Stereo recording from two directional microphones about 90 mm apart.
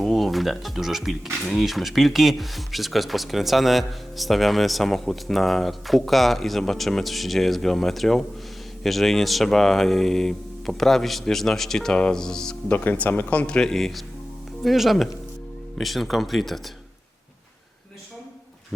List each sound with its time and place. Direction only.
0.0 s speech: centre (ahead or behind)
12.7 s speech: 20° left (ahead or behind); by 16.6 s centre (ahead or behind)